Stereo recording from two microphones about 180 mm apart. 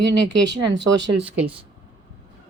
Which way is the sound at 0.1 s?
75° right (ahead or behind).